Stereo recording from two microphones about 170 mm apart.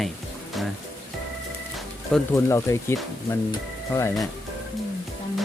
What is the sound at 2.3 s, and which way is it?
Speech, 15° left (ahead or behind).